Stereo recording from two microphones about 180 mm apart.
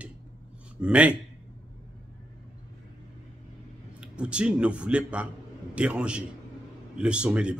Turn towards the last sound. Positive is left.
turn(degrees=-5)  # may be behind; listen again after turning